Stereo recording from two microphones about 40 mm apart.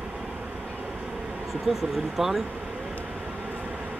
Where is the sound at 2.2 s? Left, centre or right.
Centre.